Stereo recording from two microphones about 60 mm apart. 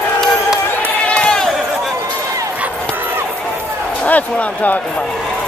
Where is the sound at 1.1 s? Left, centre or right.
Centre.